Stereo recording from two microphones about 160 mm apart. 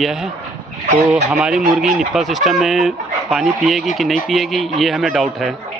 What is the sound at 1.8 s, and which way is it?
Speech, 50° right (ahead or behind).